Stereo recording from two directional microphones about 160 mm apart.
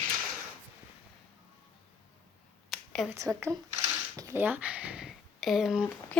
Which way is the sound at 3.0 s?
20° right (ahead or behind).